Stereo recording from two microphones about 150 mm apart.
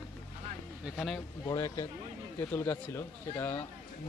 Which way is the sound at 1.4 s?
20° left (ahead or behind).